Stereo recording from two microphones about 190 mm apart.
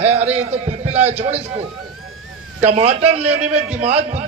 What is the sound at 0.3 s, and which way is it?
A man's voice, 35° right (ahead or behind).